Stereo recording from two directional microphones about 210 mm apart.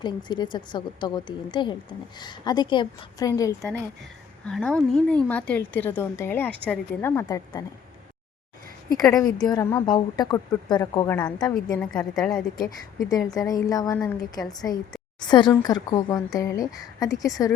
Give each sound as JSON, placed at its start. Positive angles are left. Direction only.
{"t": 0.0, "sound": "a woman's voice", "side_deg": 20}
{"t": 4.4, "sound": "a woman's voice", "side_deg": 5}
{"t": 9.0, "sound": "a woman's voice", "side_deg": 15}
{"t": 13.1, "sound": "a woman's voice", "side_deg": 15}